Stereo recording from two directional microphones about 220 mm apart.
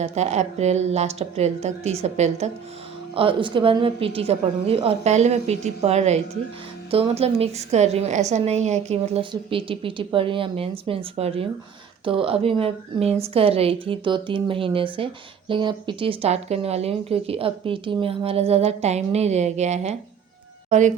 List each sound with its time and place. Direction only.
0.0 s a woman's voice: 30° right (ahead or behind)